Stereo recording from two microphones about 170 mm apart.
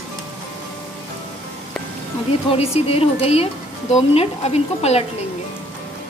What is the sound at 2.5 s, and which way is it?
Speech, 35° left (ahead or behind).